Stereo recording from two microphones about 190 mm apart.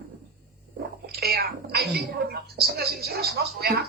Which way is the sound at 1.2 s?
55° right (ahead or behind).